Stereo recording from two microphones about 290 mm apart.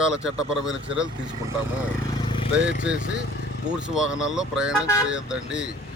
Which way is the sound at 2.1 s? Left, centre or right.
Centre.